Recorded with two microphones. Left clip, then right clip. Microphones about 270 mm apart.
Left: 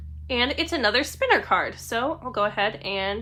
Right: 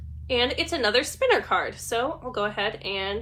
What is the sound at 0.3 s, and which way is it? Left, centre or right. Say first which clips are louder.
A woman's voice: even; left.